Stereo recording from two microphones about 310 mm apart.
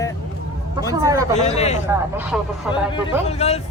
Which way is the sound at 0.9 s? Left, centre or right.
Centre.